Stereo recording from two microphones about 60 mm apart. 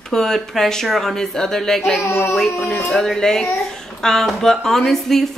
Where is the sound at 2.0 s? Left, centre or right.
Left.